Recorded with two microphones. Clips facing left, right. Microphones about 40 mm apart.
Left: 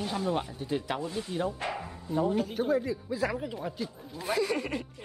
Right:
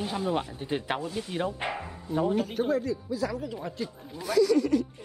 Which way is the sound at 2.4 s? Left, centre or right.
Centre.